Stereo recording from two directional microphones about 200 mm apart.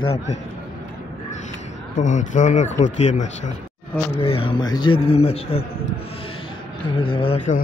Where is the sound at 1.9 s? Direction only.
40° left (ahead or behind).